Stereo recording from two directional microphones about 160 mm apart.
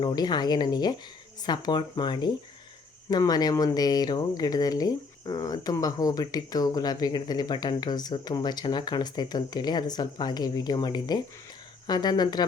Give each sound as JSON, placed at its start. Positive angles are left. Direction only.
{"t": 0.0, "sound": "speech", "side_deg": 30}